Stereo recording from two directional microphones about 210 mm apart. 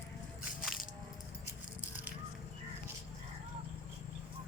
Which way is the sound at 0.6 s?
Centre (ahead or behind).